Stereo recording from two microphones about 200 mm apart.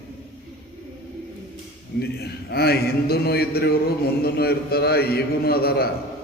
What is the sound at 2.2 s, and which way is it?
Mantra, 50° left (ahead or behind).